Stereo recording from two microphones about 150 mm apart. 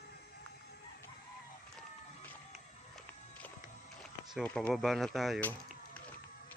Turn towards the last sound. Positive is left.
turn(degrees=10)  # may be behind; listen again after turning